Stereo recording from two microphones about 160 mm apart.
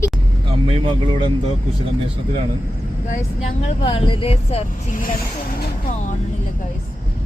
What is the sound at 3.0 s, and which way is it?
Speech, 50° left (ahead or behind).